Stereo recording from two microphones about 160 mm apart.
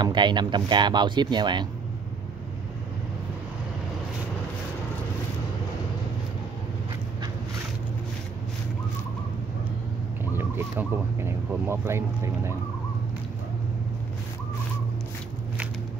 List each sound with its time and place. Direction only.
0.0 s speech: 30° right (ahead or behind)
10.3 s speech: 15° right (ahead or behind)